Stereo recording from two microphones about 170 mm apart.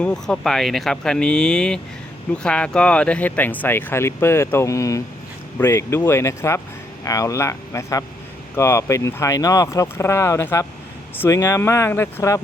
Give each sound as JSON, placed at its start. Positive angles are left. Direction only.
{"t": 0.0, "sound": "speech", "side_deg": 5}